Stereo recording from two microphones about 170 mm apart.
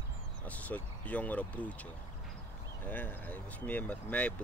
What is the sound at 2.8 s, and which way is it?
Speech, 10° left (ahead or behind).